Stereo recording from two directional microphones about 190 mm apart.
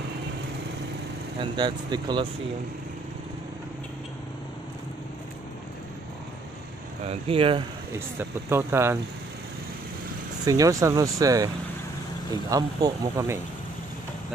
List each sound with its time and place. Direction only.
1.4 s speech: 25° right (ahead or behind)
7.1 s speech: 30° right (ahead or behind)
7.9 s speech: 15° right (ahead or behind)
10.4 s speech: 20° right (ahead or behind)